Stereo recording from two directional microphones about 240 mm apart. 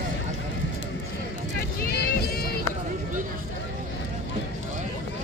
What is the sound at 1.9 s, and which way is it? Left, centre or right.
Music, left.